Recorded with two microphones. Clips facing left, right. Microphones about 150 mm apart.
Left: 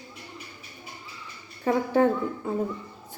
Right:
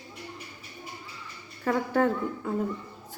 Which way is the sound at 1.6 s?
20° left (ahead or behind).